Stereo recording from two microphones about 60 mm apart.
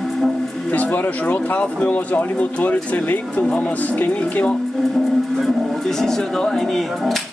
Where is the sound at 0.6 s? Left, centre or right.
Left.